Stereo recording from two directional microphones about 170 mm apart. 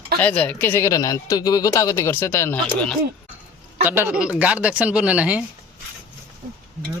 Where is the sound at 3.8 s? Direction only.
10° right (ahead or behind).